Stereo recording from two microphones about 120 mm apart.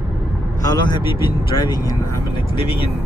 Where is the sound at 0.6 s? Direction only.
35° left (ahead or behind).